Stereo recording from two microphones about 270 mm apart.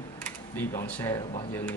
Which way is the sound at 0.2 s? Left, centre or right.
Centre.